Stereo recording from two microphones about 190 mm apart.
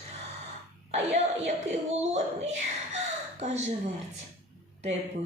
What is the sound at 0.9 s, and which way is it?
A woman's voice, 35° right (ahead or behind).